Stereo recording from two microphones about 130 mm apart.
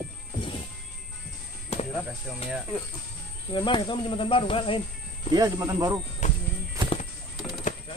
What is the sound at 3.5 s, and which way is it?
Speech, 40° left (ahead or behind).